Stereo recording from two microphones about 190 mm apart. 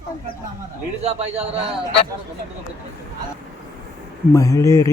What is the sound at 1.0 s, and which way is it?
Speech, 35° right (ahead or behind).